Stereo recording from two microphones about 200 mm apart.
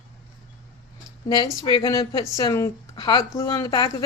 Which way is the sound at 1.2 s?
20° left (ahead or behind).